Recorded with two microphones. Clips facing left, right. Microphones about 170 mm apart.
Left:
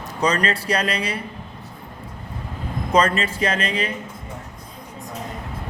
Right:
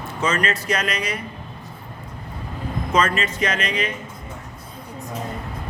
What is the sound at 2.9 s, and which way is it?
Speech, 35° left (ahead or behind).